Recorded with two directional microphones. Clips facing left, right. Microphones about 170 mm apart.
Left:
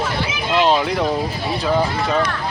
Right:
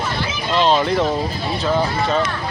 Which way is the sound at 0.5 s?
5° left (ahead or behind).